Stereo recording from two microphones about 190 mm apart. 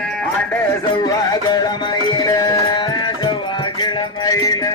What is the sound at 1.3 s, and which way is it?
Music, 20° left (ahead or behind).